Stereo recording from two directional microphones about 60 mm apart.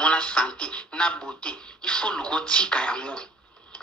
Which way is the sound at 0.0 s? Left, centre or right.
Centre.